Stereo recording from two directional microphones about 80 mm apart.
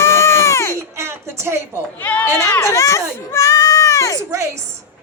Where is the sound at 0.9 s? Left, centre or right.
Right.